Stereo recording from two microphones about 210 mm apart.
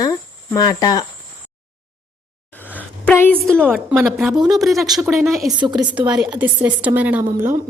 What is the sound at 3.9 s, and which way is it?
Speech, 5° right (ahead or behind).